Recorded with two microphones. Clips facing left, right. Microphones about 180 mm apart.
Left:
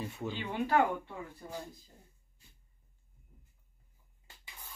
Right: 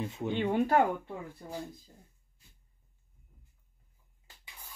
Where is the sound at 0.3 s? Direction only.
55° right (ahead or behind).